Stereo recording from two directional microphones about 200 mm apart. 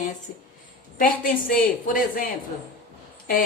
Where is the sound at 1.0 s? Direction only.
45° left (ahead or behind).